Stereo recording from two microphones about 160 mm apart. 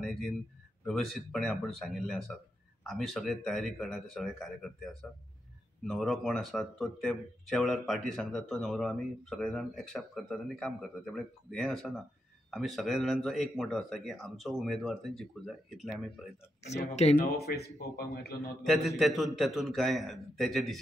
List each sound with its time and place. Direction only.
0.0 s a sound: centre (ahead or behind)
0.8 s speech: centre (ahead or behind)
16.6 s speech: 45° left (ahead or behind)
17.9 s a man's voice: 80° left
18.7 s speech: centre (ahead or behind)